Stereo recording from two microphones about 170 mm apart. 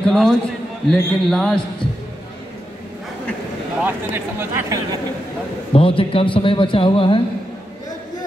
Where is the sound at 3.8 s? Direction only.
15° right (ahead or behind).